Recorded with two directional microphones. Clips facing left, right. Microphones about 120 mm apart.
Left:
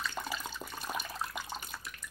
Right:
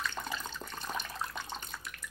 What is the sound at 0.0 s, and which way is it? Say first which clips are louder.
Water: even; 5° left (ahead or behind).